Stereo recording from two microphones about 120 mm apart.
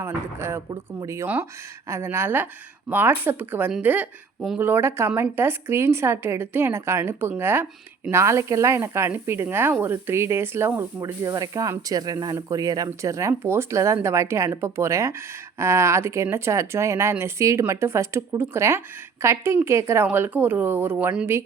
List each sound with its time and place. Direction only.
0.0 s speech: 20° right (ahead or behind)